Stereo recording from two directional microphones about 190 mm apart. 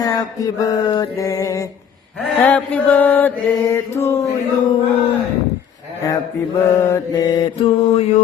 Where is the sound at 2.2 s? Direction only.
5° left (ahead or behind).